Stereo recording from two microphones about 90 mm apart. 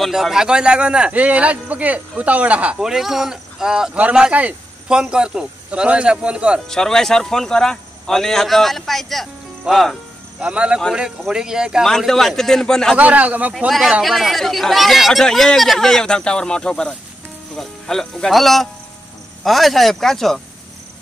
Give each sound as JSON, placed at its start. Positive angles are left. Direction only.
{"t": 0.0, "sound": "a man's voice", "side_deg": -5}
{"t": 6.7, "sound": "a man's voice", "side_deg": 5}
{"t": 10.4, "sound": "a man's voice", "side_deg": -10}
{"t": 11.8, "sound": "a man's voice", "side_deg": 5}
{"t": 12.9, "sound": "a man's voice", "side_deg": -15}
{"t": 13.7, "sound": "a man's voice", "side_deg": 0}